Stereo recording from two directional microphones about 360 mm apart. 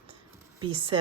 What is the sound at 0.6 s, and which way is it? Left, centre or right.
Speech, centre.